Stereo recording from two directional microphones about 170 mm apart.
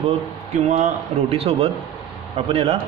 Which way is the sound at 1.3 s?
35° right (ahead or behind).